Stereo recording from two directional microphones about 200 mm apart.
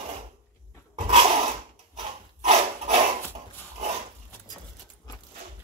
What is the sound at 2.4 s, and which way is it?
Dog, 35° right (ahead or behind).